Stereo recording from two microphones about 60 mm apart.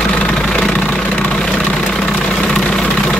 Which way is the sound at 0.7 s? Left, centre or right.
Centre.